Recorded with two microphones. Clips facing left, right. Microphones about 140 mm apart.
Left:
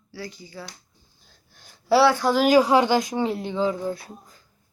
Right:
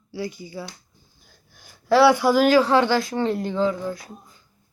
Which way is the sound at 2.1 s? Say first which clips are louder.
Right 3 dB; 15° right (ahead or behind).